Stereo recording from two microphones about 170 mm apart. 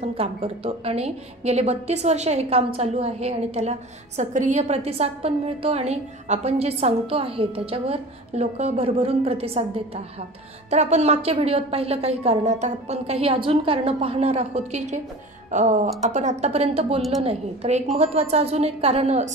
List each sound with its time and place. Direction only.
0.1 s a woman's voice: 35° right (ahead or behind)